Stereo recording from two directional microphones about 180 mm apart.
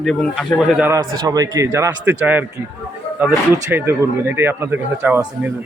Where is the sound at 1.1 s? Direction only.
20° right (ahead or behind).